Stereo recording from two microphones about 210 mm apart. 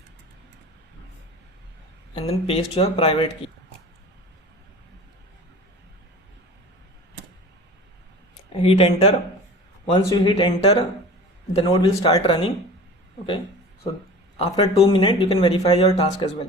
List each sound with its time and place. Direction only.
2.1 s speech: 30° left (ahead or behind)
8.6 s speech: 30° left (ahead or behind)
14.3 s speech: 30° left (ahead or behind)
16.2 s speech: 30° left (ahead or behind)